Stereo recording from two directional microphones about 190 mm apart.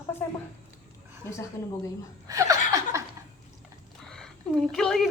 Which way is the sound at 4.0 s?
5° left (ahead or behind).